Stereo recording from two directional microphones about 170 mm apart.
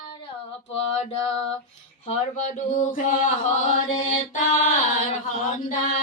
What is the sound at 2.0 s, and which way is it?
Chant, 45° left (ahead or behind).